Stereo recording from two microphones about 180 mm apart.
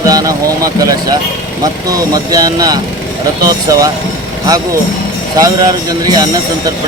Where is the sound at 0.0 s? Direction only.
20° right (ahead or behind).